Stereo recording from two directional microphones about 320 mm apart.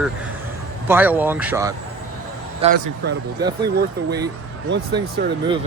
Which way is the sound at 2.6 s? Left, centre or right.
Centre.